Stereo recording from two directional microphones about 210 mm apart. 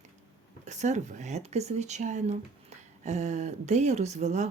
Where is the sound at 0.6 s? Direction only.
35° right (ahead or behind).